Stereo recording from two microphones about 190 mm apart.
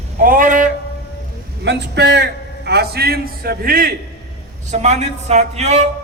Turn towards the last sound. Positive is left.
turn(degrees=-35)  # may be behind; listen again after turning